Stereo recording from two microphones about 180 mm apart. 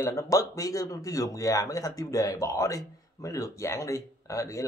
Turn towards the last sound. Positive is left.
turn(degrees=20)  # may be behind; listen again after turning